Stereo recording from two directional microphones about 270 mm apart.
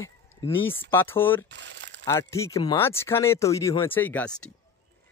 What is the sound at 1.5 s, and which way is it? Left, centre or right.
Crumpling, right.